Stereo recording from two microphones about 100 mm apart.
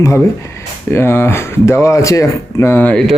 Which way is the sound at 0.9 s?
25° left (ahead or behind).